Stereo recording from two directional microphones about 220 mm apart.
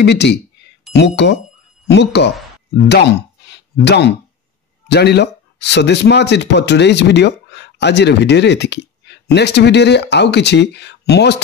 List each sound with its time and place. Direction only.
0.0 s speech: 50° left (ahead or behind)
3.4 s a sound: 50° left (ahead or behind)
4.8 s speech: 50° left (ahead or behind)